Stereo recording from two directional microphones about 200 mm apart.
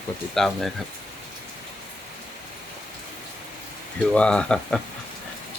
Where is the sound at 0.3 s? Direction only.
Centre (ahead or behind).